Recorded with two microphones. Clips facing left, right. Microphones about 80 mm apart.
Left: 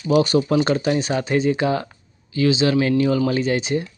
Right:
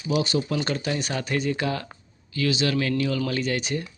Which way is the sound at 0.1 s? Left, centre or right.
Left.